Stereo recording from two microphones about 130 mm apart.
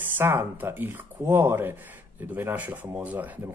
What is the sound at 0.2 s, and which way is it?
Speech, 20° right (ahead or behind).